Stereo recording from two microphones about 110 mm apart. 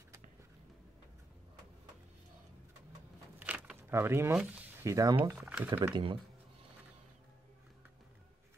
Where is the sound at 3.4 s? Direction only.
10° right (ahead or behind).